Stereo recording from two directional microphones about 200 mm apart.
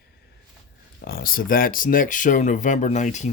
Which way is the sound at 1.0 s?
50° left (ahead or behind).